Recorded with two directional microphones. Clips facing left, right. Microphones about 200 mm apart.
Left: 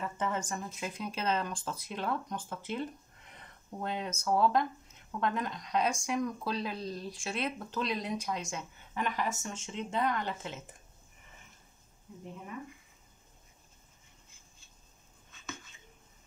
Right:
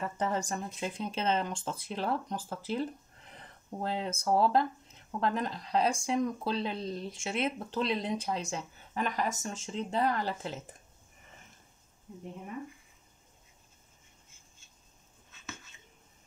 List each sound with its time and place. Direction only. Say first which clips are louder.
0.2 s speech: right 2 dB; 35° right (ahead or behind)